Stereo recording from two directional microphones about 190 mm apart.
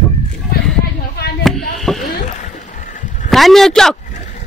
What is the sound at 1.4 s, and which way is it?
Chop, centre (ahead or behind).